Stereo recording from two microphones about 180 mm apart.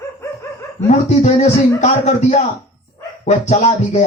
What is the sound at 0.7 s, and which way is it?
A man's voice, 40° left (ahead or behind).